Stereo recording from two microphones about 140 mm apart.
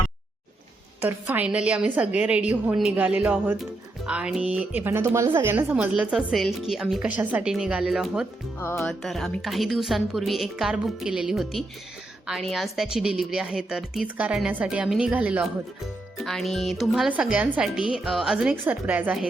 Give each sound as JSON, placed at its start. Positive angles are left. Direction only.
{"t": 1.0, "sound": "a woman's voice", "side_deg": -10}
{"t": 8.6, "sound": "music", "side_deg": 15}
{"t": 8.9, "sound": "a woman's voice", "side_deg": 0}
{"t": 16.2, "sound": "a woman's voice", "side_deg": 0}